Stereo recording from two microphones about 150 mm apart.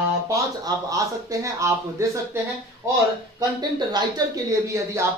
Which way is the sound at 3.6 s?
30° right (ahead or behind).